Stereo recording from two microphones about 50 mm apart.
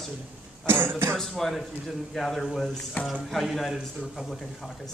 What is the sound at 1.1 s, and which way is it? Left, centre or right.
A man's voice, centre.